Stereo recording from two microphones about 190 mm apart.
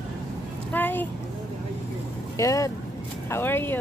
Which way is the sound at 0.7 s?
10° left (ahead or behind).